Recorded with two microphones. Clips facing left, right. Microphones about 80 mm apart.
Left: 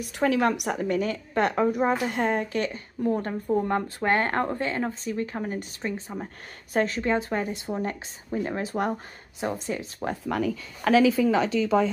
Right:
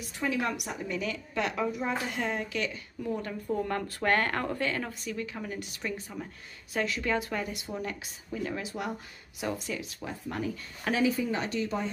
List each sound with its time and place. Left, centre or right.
0.0 s a woman's voice: left
3.5 s a woman's voice: left
9.4 s a woman's voice: left
10.2 s speech: left